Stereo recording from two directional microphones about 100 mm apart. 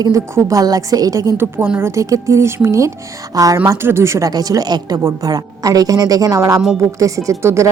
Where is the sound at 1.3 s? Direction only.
25° right (ahead or behind).